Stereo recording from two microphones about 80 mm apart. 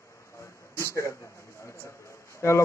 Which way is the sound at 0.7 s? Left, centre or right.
Left.